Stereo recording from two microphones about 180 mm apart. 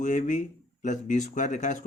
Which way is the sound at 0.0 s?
45° left (ahead or behind).